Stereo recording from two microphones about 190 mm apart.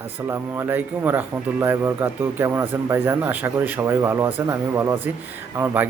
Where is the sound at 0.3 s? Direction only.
15° right (ahead or behind).